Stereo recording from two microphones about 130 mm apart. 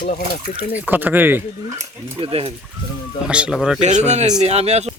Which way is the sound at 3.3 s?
10° right (ahead or behind).